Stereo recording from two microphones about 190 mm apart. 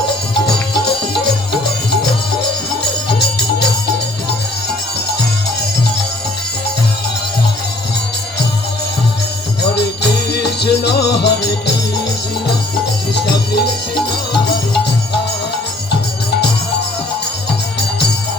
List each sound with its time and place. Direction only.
0.4 s music: 60° left (ahead or behind)
3.2 s music: 60° left (ahead or behind)
9.6 s music: 60° left (ahead or behind)
13.1 s music: 60° left (ahead or behind)